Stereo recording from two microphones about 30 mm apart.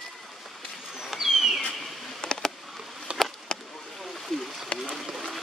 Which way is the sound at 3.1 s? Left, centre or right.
Right.